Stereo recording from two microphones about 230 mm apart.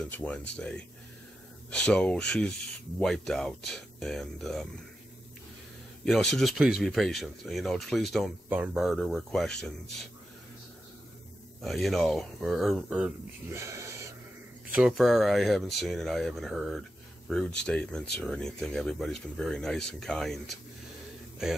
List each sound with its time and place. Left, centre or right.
0.0 s speech: centre
6.3 s speech: centre
11.6 s speech: centre